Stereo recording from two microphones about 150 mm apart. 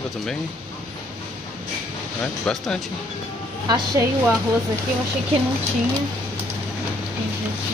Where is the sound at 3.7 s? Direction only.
25° right (ahead or behind).